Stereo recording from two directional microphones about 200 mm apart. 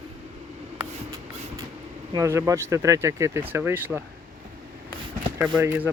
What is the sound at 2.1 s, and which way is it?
Speech, 15° right (ahead or behind).